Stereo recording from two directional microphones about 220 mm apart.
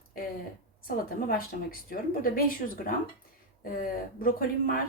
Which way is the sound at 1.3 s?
40° left (ahead or behind).